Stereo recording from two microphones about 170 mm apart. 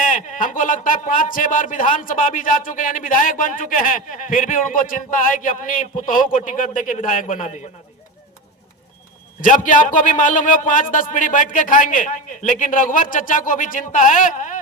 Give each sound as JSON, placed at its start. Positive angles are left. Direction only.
{"t": 0.0, "sound": "speech", "side_deg": 50}
{"t": 9.4, "sound": "speech", "side_deg": 50}